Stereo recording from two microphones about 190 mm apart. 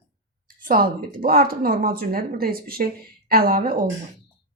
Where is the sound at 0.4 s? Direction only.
50° right (ahead or behind).